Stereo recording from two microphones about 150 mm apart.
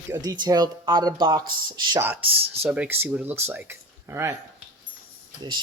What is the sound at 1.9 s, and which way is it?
Speech, 15° right (ahead or behind).